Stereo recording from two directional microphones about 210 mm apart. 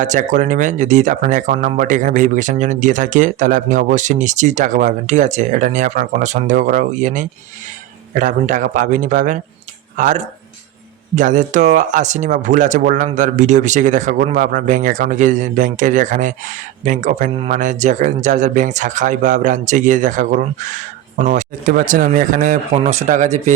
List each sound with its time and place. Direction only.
0.0 s speech: 35° right (ahead or behind)